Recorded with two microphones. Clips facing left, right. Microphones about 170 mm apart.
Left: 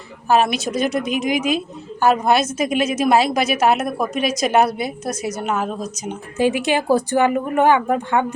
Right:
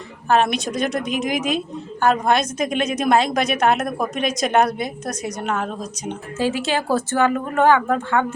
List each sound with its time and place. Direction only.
0.3 s a woman's voice: 5° left (ahead or behind)
6.3 s speech: 15° left (ahead or behind)